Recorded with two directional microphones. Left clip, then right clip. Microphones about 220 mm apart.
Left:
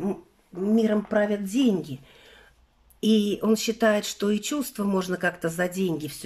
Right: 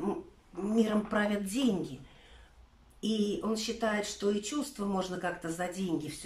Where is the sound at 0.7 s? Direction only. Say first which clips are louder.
Left 7 dB; 30° left (ahead or behind).